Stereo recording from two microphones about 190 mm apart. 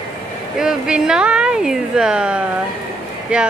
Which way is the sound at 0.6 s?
5° right (ahead or behind).